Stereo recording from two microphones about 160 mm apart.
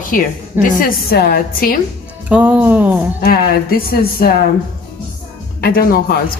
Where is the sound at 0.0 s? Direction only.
55° left (ahead or behind).